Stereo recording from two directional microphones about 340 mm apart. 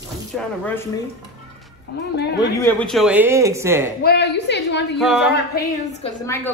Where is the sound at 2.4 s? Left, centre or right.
Centre.